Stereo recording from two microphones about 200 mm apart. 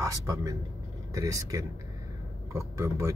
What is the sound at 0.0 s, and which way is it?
Speech, 15° right (ahead or behind).